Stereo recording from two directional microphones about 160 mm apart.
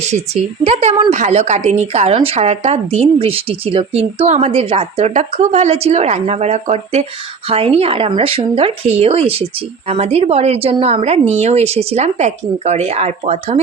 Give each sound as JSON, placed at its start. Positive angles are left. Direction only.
{"t": 0.6, "sound": "speech", "side_deg": -40}